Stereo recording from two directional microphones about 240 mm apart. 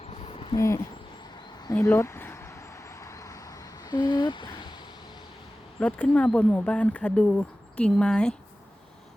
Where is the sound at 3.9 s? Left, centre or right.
Centre.